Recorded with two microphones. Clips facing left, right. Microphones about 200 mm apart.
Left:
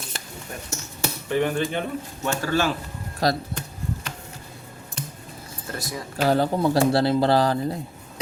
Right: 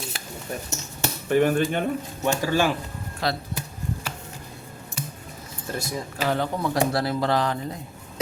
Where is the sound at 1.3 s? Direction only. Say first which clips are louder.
Right 3 dB; 50° right (ahead or behind).